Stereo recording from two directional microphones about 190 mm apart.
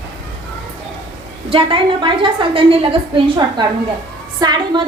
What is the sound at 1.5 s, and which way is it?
A woman's voice, 25° right (ahead or behind).